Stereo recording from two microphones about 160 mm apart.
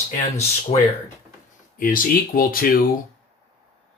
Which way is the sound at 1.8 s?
60° left (ahead or behind).